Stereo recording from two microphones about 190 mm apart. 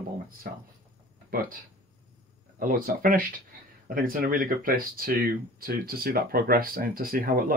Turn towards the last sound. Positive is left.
turn(degrees=-50)  # may be behind; listen again after turning